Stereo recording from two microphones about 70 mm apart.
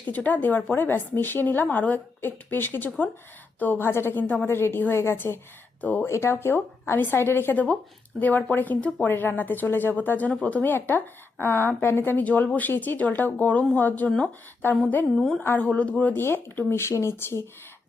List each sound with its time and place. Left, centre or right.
0.0 s a woman's voice: left
6.1 s a woman's voice: left
15.1 s a woman's voice: centre
15.5 s a woman's voice: left
16.1 s a woman's voice: left